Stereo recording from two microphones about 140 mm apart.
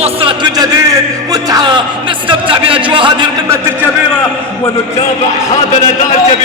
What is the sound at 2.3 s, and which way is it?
A man's voice, 40° right (ahead or behind).